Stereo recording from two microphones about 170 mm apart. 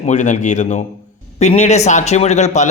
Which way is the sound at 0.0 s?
45° left (ahead or behind).